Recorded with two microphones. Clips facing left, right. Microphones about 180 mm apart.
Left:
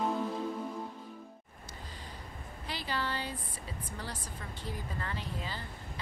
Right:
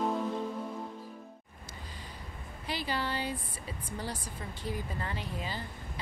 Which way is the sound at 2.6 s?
15° right (ahead or behind).